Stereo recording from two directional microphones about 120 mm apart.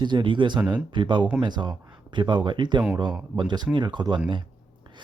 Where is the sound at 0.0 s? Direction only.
40° right (ahead or behind).